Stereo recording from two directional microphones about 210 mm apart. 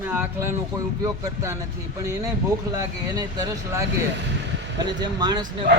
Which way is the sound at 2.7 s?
20° right (ahead or behind).